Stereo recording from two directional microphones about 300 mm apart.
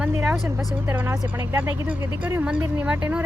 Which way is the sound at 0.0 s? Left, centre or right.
Centre.